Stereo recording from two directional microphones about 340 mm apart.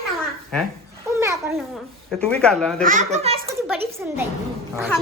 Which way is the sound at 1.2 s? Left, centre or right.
Centre.